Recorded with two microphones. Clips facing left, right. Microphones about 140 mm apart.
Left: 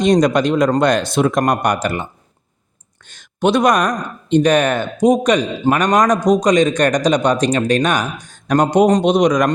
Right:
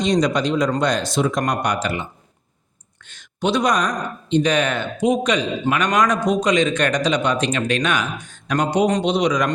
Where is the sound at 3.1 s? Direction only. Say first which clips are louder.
Left 5 dB; 50° left (ahead or behind).